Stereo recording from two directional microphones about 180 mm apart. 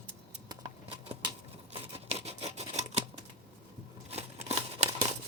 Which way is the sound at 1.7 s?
35° right (ahead or behind).